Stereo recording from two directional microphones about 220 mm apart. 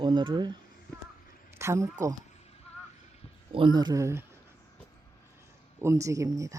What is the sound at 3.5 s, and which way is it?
Speech, 20° right (ahead or behind).